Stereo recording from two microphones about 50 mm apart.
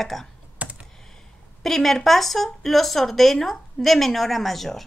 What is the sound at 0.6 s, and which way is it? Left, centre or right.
Computer keyboard, right.